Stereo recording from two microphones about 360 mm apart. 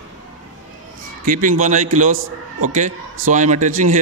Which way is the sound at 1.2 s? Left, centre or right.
Right.